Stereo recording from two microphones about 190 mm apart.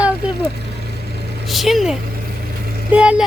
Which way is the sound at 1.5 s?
Centre (ahead or behind).